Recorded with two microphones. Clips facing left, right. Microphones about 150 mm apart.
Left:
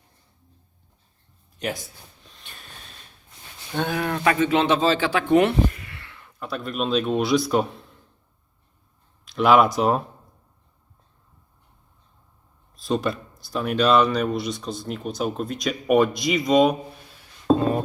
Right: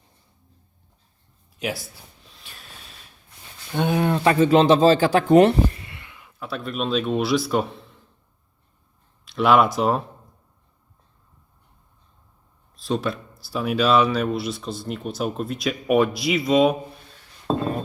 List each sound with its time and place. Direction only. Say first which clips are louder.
1.5 s gasp: right 1 dB; 5° right (ahead or behind)
3.8 s speech: right 4 dB; 20° right (ahead or behind); by 5.8 s 40° right (ahead or behind)
5.8 s speech: even; 20° right (ahead or behind); by 7.9 s centre (ahead or behind)
9.2 s speech: left 1 dB; centre (ahead or behind)
12.7 s speech: left 1 dB; centre (ahead or behind)